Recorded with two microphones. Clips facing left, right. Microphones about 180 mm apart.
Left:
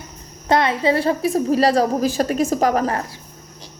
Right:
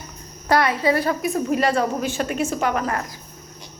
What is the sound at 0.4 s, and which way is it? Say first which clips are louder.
A woman's voice: left 1 dB; 25° left (ahead or behind).